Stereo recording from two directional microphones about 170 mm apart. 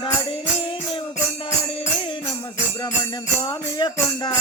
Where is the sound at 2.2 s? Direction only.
20° left (ahead or behind).